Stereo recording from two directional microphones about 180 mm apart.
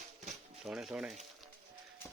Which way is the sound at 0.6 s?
5° right (ahead or behind).